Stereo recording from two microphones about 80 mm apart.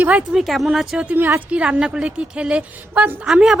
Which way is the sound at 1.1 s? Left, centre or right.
Right.